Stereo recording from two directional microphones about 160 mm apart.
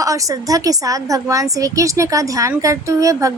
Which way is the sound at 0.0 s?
20° right (ahead or behind).